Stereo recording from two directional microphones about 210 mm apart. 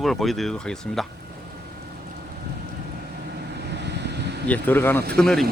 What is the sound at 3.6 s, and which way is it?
Vehicle, 55° right (ahead or behind).